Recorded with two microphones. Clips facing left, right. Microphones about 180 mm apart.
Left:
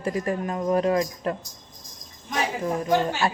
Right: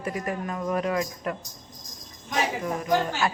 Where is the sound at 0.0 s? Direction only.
30° left (ahead or behind).